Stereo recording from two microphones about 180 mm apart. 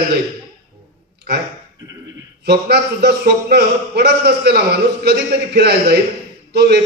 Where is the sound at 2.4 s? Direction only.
65° right (ahead or behind).